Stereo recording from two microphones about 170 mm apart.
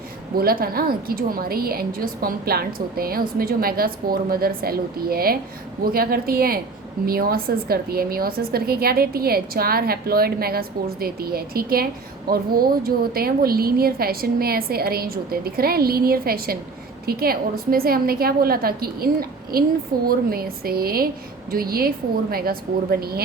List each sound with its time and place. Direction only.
0.3 s a woman's voice: 60° right (ahead or behind)